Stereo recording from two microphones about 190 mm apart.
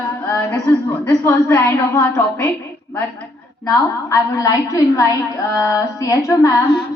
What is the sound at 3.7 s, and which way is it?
A woman's voice, 20° left (ahead or behind).